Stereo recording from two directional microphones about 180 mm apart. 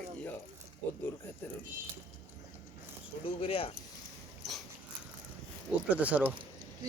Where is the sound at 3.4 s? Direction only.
30° left (ahead or behind).